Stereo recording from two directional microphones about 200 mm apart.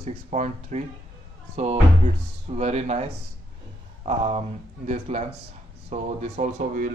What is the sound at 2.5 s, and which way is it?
Speech, 35° right (ahead or behind).